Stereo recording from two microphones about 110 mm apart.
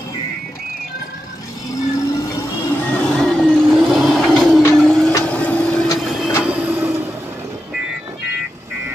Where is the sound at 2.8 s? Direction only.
15° left (ahead or behind).